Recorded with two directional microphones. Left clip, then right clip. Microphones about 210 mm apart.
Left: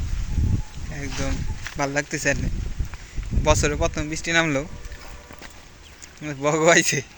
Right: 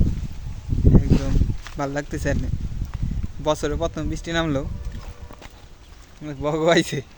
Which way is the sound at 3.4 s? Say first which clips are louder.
Left 2 dB; 20° right (ahead or behind).